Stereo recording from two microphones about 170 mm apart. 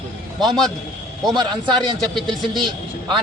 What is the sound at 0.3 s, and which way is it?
Speech, centre (ahead or behind).